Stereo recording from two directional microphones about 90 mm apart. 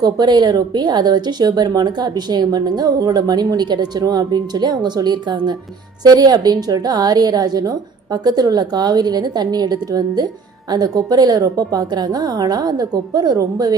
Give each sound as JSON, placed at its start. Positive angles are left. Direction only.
{"t": 0.0, "sound": "speech", "side_deg": -50}